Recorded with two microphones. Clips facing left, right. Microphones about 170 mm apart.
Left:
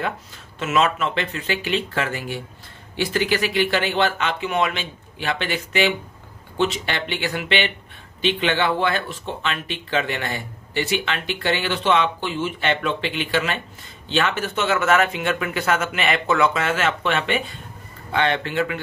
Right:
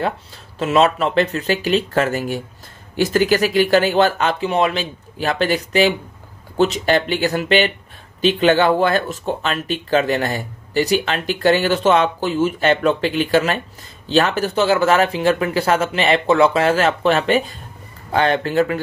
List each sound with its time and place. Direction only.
0.6 s speech: 35° right (ahead or behind)